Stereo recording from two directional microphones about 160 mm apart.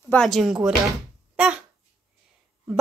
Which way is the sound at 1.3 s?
10° right (ahead or behind).